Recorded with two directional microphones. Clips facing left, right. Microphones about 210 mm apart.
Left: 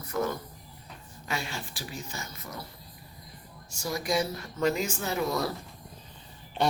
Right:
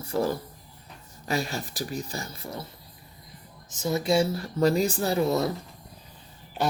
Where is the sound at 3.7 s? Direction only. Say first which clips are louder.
Right 5 dB; 20° right (ahead or behind).